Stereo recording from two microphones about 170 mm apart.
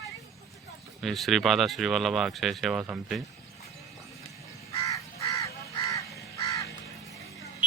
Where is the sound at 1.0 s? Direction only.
Centre (ahead or behind).